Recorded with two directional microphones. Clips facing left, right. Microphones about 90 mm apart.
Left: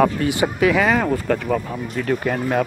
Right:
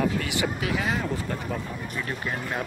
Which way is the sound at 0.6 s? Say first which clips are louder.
Left 10 dB; 90° left.